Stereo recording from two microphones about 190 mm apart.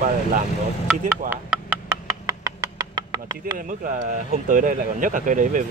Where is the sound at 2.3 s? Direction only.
20° right (ahead or behind).